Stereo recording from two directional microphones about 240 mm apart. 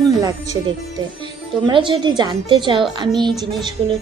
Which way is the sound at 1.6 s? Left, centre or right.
Centre.